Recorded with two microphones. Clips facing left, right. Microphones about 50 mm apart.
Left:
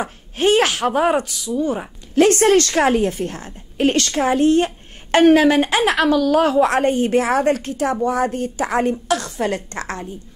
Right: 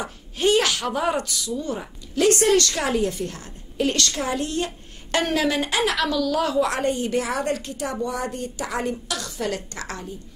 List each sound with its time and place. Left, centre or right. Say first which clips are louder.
0.0 s a woman's voice: left 4 dB; left
1.1 s speech: left 6 dB; left
2.1 s a woman's voice: left 5 dB; left